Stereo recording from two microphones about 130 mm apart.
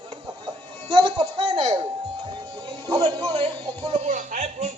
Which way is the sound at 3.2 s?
55° right (ahead or behind).